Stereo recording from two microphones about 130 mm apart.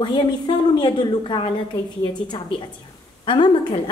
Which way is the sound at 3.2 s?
40° left (ahead or behind).